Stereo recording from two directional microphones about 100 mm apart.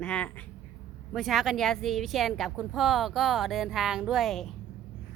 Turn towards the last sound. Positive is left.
turn(degrees=0)  # may be behind; listen again after turning